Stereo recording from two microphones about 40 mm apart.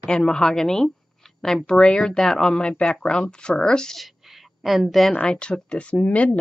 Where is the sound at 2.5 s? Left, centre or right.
Left.